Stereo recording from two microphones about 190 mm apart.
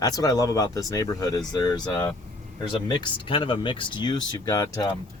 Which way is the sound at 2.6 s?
20° left (ahead or behind).